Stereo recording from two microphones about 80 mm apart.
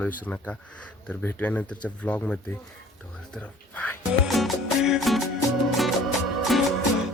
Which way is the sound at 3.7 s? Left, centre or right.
Centre.